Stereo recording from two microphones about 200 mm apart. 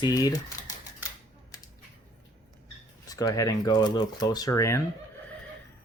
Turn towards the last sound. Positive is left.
turn(degrees=15)  # may be behind; listen again after turning